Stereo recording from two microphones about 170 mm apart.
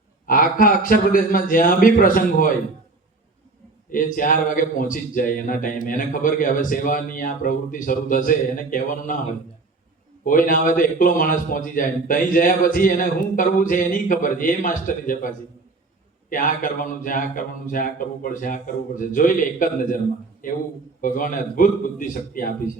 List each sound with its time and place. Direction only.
0.3 s a man's voice: 55° left (ahead or behind)
3.9 s a man's voice: 55° left (ahead or behind)
10.2 s a man's voice: 55° left (ahead or behind)